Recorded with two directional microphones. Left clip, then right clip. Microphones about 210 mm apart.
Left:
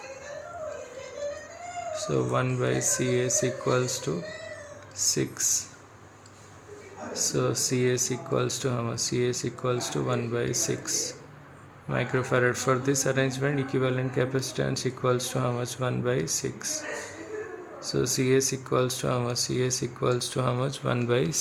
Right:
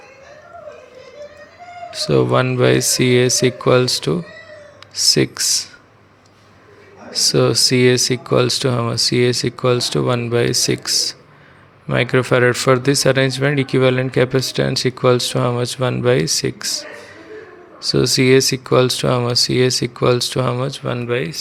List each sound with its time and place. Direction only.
1.9 s speech: 35° right (ahead or behind)
7.1 s speech: 35° right (ahead or behind)
21.0 s speech: 5° right (ahead or behind)